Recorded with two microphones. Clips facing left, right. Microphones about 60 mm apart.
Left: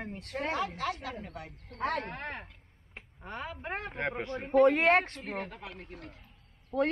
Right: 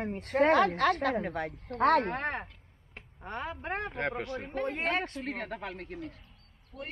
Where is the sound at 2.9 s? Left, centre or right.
Centre.